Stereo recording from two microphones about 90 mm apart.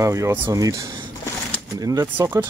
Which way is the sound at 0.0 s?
35° right (ahead or behind).